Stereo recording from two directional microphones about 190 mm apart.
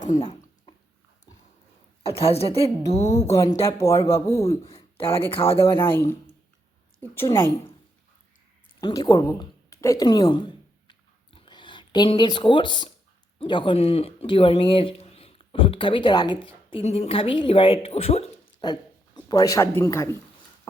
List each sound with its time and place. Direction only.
2.0 s a woman's voice: 30° left (ahead or behind)
3.2 s speech: 15° left (ahead or behind)
4.6 s speech: 30° left (ahead or behind)
5.6 s speech: 10° left (ahead or behind)
7.1 s speech: 15° left (ahead or behind)
8.8 s a woman's voice: 20° left (ahead or behind)
18.6 s speech: 20° left (ahead or behind)